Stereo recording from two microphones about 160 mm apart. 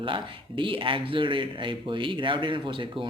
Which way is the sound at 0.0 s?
30° right (ahead or behind).